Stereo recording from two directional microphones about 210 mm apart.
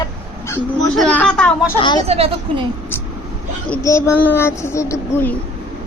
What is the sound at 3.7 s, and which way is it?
A child's voice, 15° left (ahead or behind).